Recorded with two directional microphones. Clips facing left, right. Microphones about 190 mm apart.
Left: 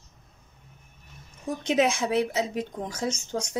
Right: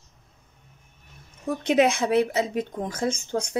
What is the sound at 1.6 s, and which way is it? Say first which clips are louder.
Speech: right 3 dB; 60° right (ahead or behind).